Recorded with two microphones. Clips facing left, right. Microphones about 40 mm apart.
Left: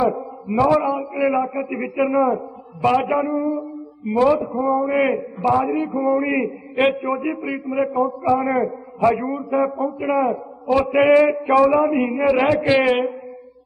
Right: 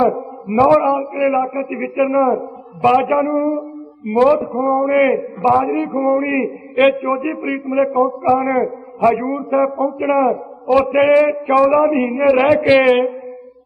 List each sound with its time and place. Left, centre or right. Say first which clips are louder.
0.0 s a man's voice: right 4 dB; centre
10.7 s a sound: right 3 dB; centre
12.2 s a man's voice: right 6 dB; centre